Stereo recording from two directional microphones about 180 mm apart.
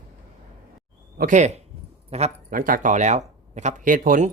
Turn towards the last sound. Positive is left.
turn(degrees=-45)  # may be behind; listen again after turning